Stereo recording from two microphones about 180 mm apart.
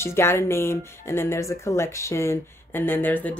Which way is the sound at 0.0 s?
15° left (ahead or behind).